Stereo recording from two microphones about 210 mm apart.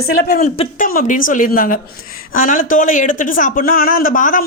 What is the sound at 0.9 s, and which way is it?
Speech, 40° left (ahead or behind).